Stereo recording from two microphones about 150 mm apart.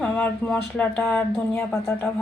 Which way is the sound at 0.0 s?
10° left (ahead or behind).